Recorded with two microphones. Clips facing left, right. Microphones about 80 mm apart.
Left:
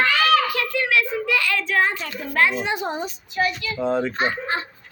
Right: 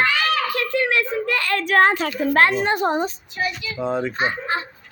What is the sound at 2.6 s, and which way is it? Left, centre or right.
Speech, right.